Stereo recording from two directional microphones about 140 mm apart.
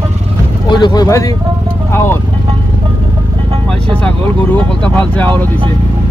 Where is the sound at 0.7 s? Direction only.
30° left (ahead or behind).